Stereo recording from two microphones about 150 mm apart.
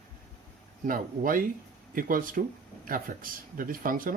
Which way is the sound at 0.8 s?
65° right (ahead or behind).